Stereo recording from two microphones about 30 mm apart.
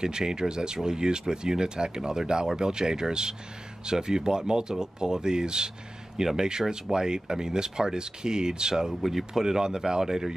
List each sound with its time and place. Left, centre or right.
0.0 s speech: right